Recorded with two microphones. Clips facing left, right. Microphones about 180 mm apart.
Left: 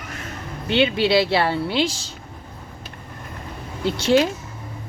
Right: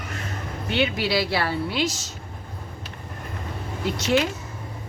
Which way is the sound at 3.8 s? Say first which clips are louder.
Left 5 dB; 30° left (ahead or behind).